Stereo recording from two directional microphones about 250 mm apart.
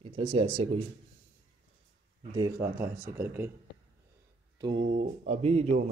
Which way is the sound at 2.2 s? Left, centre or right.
Centre.